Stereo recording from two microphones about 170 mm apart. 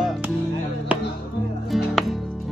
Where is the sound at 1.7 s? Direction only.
Centre (ahead or behind).